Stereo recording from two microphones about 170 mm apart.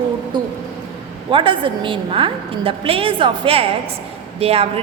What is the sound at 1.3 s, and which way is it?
A woman's voice, 30° right (ahead or behind).